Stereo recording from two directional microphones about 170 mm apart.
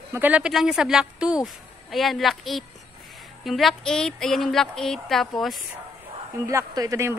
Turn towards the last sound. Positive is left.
turn(degrees=-15)  # may be behind; listen again after turning